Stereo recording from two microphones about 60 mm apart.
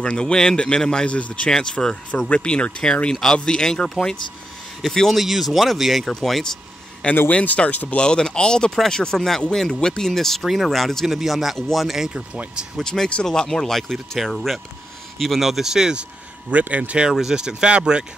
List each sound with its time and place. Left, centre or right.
0.0 s speech: centre
7.2 s speech: left
8.0 s speech: centre
12.1 s speech: centre
12.7 s speech: centre; by 17.1 s right
17.1 s speech: centre